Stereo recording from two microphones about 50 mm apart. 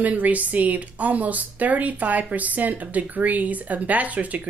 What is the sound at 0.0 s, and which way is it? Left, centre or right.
A woman's voice, right.